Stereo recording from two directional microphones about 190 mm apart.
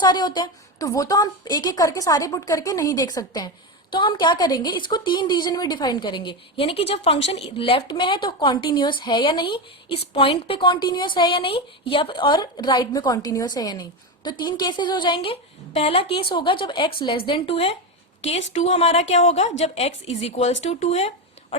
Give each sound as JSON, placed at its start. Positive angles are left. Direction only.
{"t": 0.0, "sound": "a woman's voice", "side_deg": 20}